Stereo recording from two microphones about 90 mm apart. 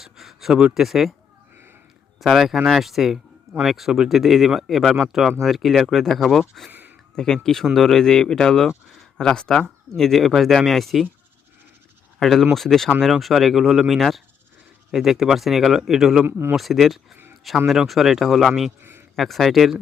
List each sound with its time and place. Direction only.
0.0 s speech: centre (ahead or behind)
2.2 s speech: centre (ahead or behind)
6.7 s a sound: 20° right (ahead or behind)
7.4 s speech: centre (ahead or behind)
12.2 s speech: centre (ahead or behind)
16.2 s speech: 25° right (ahead or behind)
16.6 s speech: centre (ahead or behind)
18.8 s a sound: 25° right (ahead or behind)
19.1 s speech: centre (ahead or behind)